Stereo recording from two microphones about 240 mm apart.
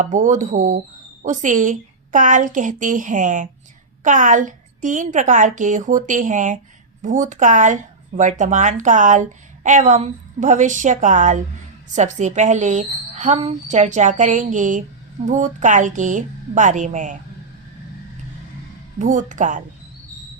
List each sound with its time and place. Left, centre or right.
0.0 s a woman's voice: right
18.9 s a woman's voice: right